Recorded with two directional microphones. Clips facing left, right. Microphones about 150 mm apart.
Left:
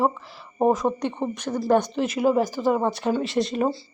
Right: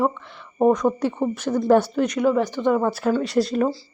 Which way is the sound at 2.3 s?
40° left (ahead or behind).